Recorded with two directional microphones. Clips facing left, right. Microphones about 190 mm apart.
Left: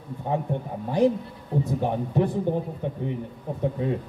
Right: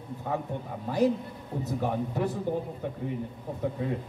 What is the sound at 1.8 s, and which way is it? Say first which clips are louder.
Speech: left 3 dB; 20° left (ahead or behind).